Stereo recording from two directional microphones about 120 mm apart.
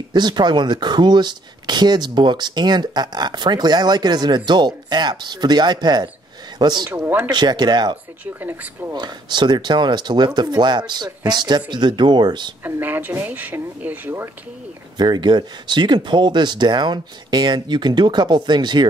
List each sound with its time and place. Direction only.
0.1 s speech: 40° right (ahead or behind)
6.9 s speech: 15° right (ahead or behind)
7.2 s speech: 35° right (ahead or behind)
8.4 s speech: 15° right (ahead or behind)
8.9 s speech: 40° right (ahead or behind)
12.6 s speech: 15° right (ahead or behind)
15.0 s speech: 40° right (ahead or behind)